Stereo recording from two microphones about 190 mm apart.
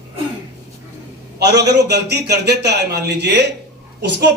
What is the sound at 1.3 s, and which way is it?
A man's voice, 60° right (ahead or behind).